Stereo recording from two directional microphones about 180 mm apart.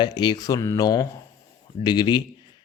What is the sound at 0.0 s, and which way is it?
A man's voice, 25° left (ahead or behind).